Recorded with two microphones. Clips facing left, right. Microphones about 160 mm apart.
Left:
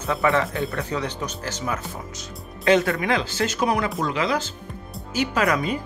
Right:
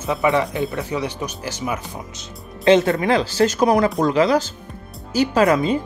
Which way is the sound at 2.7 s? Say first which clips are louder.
Right 4 dB; 25° right (ahead or behind).